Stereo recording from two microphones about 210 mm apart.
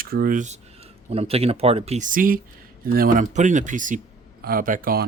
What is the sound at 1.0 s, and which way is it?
Speech, 30° right (ahead or behind).